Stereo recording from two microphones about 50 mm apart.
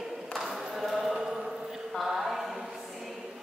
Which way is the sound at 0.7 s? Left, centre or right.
Centre.